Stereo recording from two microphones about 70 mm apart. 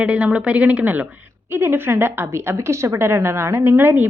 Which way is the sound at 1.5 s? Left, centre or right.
Right.